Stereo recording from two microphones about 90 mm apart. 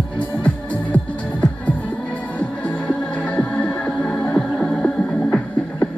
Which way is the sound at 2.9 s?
15° left (ahead or behind).